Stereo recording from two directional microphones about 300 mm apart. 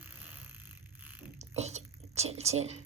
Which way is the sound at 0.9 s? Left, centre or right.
Centre.